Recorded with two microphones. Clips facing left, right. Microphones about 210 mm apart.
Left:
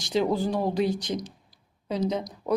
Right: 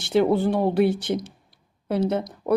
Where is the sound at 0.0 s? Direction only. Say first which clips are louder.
Right 5 dB; 65° right (ahead or behind).